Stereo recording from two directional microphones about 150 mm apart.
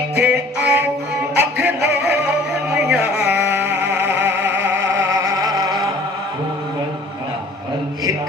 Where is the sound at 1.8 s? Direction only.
90° right.